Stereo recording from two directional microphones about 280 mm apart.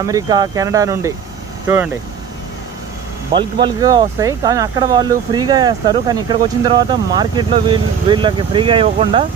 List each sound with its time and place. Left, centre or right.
0.0 s speech: centre
3.3 s speech: centre